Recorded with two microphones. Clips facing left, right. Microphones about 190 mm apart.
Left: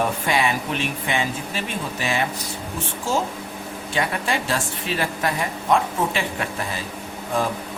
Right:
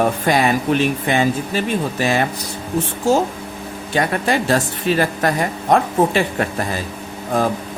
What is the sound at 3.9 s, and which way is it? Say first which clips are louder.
A woman's voice: right 6 dB; 40° right (ahead or behind).